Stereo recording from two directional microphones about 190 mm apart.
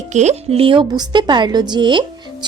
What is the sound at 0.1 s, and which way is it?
A woman's voice, 35° right (ahead or behind).